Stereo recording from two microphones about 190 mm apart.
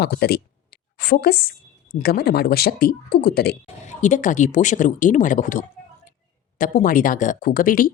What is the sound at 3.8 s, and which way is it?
Speech, 40° left (ahead or behind).